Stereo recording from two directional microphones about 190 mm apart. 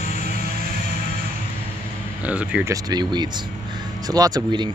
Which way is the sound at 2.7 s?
20° right (ahead or behind).